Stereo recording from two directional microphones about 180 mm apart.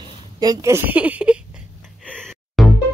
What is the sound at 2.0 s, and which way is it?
Music, 5° left (ahead or behind).